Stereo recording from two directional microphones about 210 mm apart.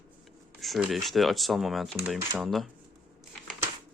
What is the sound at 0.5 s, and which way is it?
Speech, centre (ahead or behind).